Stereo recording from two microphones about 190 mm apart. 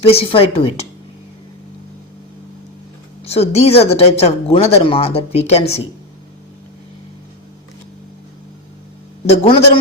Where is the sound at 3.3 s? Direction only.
35° left (ahead or behind).